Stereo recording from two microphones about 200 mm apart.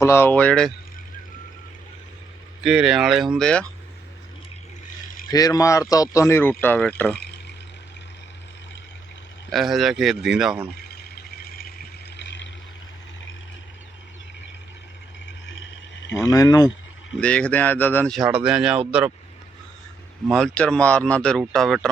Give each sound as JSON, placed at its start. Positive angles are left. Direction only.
{"t": 0.0, "sound": "speech", "side_deg": 10}
{"t": 2.6, "sound": "speech", "side_deg": -5}
{"t": 5.3, "sound": "speech", "side_deg": 15}
{"t": 9.5, "sound": "speech", "side_deg": 0}
{"t": 11.1, "sound": "vehicle", "side_deg": 50}
{"t": 16.1, "sound": "speech", "side_deg": 15}
{"t": 17.2, "sound": "speech", "side_deg": 5}
{"t": 20.2, "sound": "speech", "side_deg": 0}